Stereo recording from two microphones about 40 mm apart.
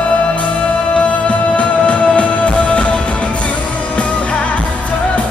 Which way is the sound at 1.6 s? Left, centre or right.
Left.